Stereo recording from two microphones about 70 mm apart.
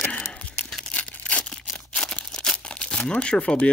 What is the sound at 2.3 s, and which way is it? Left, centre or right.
Crumpling, centre.